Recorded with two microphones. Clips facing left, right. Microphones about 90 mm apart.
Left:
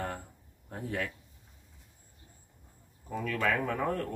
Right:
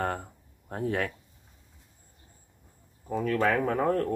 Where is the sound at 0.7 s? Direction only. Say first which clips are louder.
Right 6 dB; 55° right (ahead or behind).